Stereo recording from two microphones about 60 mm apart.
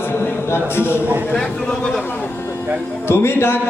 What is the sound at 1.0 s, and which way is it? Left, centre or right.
Speech, right.